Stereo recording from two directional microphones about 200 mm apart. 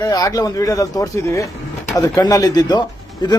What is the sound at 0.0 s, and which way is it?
Speech, 15° left (ahead or behind).